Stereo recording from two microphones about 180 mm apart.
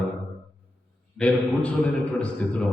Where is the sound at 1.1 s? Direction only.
5° left (ahead or behind).